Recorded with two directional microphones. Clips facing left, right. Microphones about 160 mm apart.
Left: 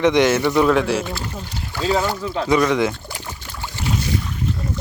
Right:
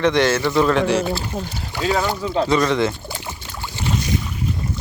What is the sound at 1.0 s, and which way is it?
Speech, 30° right (ahead or behind).